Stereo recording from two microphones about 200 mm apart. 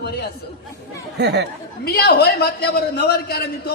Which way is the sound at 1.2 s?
55° right (ahead or behind).